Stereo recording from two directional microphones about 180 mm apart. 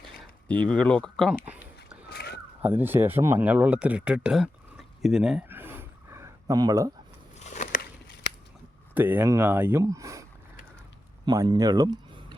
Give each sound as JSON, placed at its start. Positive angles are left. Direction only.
{"t": 0.2, "sound": "speech", "side_deg": 5}
{"t": 2.0, "sound": "a sound", "side_deg": 60}
{"t": 2.6, "sound": "speech", "side_deg": -10}
{"t": 7.3, "sound": "biting", "side_deg": 40}
{"t": 9.0, "sound": "speech", "side_deg": -10}
{"t": 11.3, "sound": "speech", "side_deg": -20}